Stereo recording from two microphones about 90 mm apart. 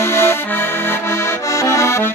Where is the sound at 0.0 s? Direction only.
30° left (ahead or behind).